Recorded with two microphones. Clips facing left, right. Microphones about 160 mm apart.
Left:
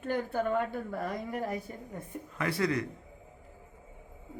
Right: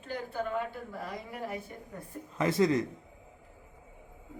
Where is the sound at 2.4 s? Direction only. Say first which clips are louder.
Right 4 dB; 20° right (ahead or behind).